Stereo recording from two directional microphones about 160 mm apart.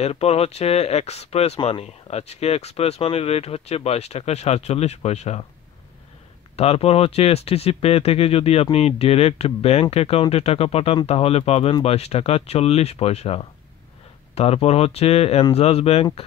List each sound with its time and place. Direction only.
0.0 s speech: 40° left (ahead or behind)
6.5 s speech: 40° left (ahead or behind)